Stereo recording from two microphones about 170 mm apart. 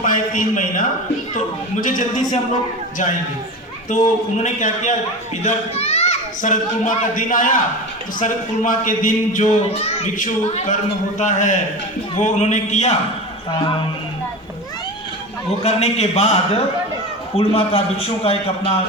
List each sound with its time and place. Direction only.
0.0 s a man's voice: 50° left (ahead or behind)
3.8 s a man's voice: 45° left (ahead or behind)
13.5 s a man's voice: 30° left (ahead or behind)
15.6 s a man's voice: 40° left (ahead or behind)